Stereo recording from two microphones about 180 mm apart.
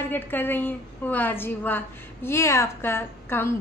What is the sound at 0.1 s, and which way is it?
A woman's voice, 10° left (ahead or behind).